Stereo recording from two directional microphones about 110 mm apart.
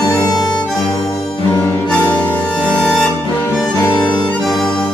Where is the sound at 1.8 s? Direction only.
10° left (ahead or behind).